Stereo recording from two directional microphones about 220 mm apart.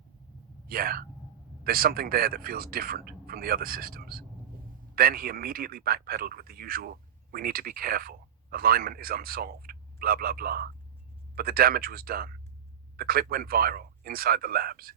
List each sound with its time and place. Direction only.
0.7 s speech: 45° right (ahead or behind)